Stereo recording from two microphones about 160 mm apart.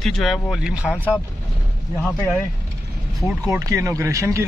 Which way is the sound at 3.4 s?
20° right (ahead or behind).